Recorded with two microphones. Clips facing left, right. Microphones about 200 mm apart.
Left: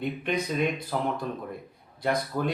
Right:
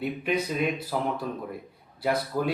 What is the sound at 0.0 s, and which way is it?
Speech, 5° right (ahead or behind).